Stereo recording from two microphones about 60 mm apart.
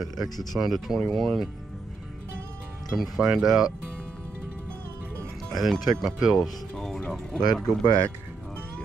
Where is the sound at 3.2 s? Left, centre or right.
Centre.